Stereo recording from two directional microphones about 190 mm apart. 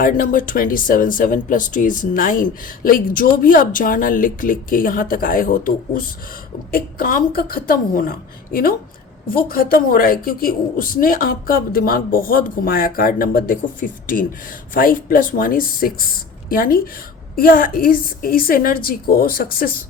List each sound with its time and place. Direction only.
0.0 s speech: 45° left (ahead or behind)